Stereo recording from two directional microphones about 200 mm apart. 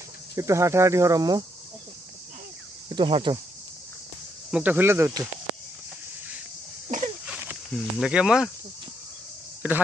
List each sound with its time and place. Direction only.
0.4 s cricket: 15° right (ahead or behind)
2.9 s speech: 25° right (ahead or behind)
4.5 s cricket: 5° right (ahead or behind)
7.2 s speech: 5° right (ahead or behind)
9.6 s a man's voice: 10° right (ahead or behind)